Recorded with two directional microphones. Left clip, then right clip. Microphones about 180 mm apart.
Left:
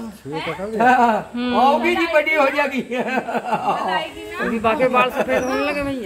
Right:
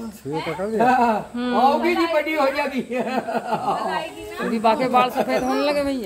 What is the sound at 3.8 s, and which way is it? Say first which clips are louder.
Speech: left 3 dB; 5° left (ahead or behind).